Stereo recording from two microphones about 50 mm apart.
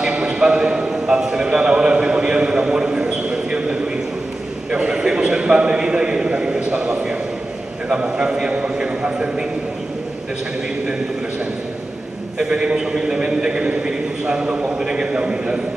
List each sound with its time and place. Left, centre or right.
0.0 s a sound: centre
7.9 s a man's voice: centre
12.4 s a man's voice: centre